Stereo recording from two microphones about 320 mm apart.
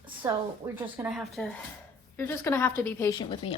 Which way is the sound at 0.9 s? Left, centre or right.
Centre.